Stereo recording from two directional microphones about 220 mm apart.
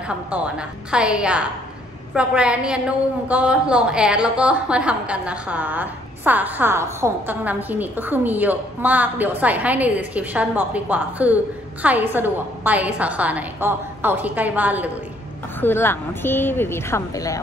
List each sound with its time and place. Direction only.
0.3 s a woman's voice: 5° right (ahead or behind)
15.6 s speech: 10° left (ahead or behind)